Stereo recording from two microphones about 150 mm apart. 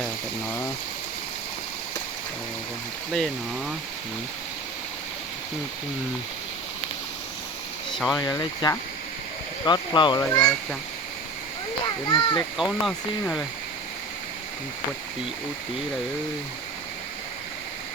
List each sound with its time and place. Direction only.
7.9 s speech: centre (ahead or behind)
8.2 s speech: 25° left (ahead or behind)
10.2 s speech: 20° left (ahead or behind)
12.0 s speech: 30° left (ahead or behind)
12.5 s speech: centre (ahead or behind)